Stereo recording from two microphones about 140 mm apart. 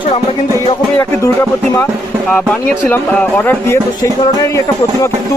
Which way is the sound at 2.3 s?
10° left (ahead or behind).